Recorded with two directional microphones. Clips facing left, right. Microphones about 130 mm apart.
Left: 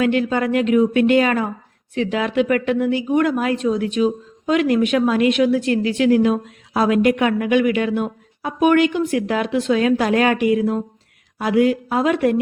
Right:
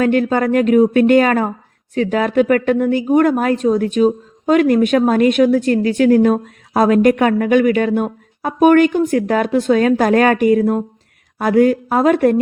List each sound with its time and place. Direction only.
0.0 s speech: 45° right (ahead or behind)